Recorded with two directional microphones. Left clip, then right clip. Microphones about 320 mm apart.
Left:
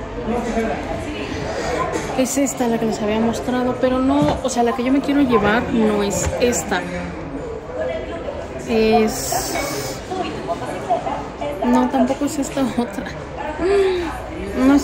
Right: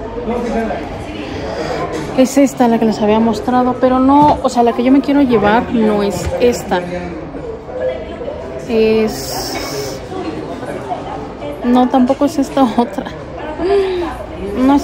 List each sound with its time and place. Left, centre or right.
2.1 s a woman's voice: right
8.6 s speech: centre
11.7 s speech: centre
13.7 s a sound: centre